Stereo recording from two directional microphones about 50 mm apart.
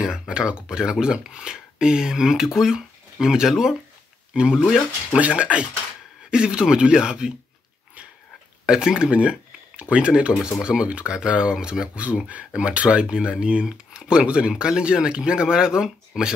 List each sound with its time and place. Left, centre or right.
0.0 s speech: centre
8.6 s speech: centre